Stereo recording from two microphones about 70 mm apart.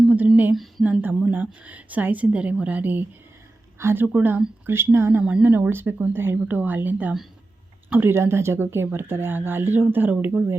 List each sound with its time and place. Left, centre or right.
0.5 s speech: centre
0.9 s a woman's voice: right
5.2 s a woman's voice: centre